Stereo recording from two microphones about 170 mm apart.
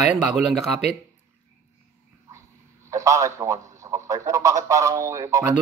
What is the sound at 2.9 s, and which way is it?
A man's voice, 20° right (ahead or behind).